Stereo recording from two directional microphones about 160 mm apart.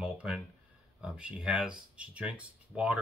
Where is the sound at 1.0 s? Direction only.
5° right (ahead or behind).